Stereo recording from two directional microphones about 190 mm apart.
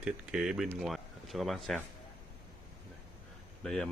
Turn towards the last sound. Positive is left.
turn(degrees=5)  # may be behind; listen again after turning